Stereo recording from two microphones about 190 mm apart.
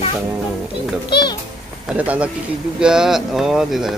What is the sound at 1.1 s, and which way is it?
Speech, 20° left (ahead or behind).